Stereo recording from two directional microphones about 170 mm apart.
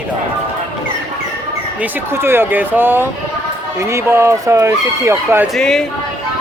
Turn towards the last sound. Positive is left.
turn(degrees=5)  # may be behind; listen again after turning